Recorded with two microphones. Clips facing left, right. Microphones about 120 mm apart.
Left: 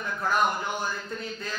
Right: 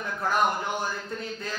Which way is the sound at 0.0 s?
35° right (ahead or behind).